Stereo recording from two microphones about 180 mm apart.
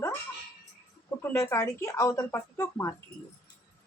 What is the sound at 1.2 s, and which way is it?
Speech, 15° left (ahead or behind).